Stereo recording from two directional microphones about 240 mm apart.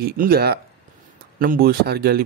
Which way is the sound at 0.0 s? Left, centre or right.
Right.